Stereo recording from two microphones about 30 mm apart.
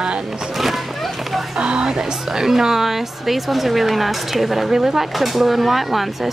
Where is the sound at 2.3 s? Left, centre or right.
Centre.